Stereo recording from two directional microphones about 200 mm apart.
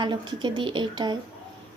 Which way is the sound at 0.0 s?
20° right (ahead or behind).